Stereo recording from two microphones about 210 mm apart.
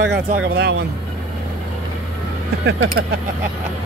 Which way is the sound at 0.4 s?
50° right (ahead or behind).